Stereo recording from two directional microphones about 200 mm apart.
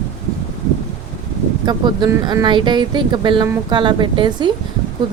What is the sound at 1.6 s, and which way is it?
Speech, 20° right (ahead or behind).